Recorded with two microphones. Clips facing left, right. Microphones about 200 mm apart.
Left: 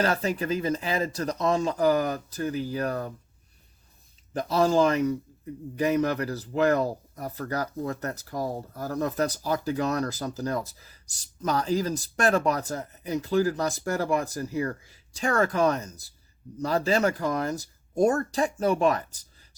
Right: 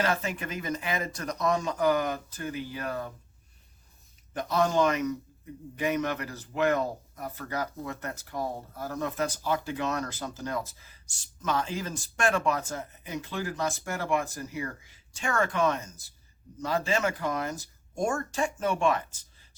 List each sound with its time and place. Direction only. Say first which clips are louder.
0.0 s a man's voice: left 4 dB; 40° left (ahead or behind)
4.4 s a man's voice: left 3 dB; 30° left (ahead or behind)